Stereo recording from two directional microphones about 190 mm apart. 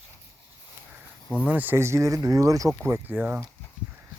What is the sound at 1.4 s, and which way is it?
Speech, 10° right (ahead or behind).